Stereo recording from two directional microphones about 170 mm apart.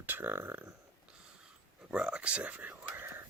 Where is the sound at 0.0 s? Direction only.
10° right (ahead or behind).